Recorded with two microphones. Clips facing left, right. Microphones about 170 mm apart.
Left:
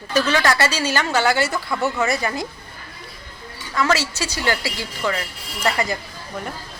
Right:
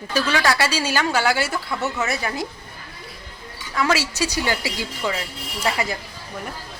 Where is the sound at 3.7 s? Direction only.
10° right (ahead or behind).